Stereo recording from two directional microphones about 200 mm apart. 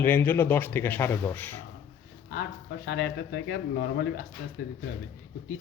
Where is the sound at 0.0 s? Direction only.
10° left (ahead or behind).